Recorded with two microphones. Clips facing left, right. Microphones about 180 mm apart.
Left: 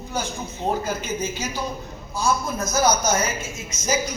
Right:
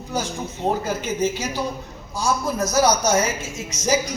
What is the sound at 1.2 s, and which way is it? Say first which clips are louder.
A woman's voice: right 5 dB; 75° right (ahead or behind).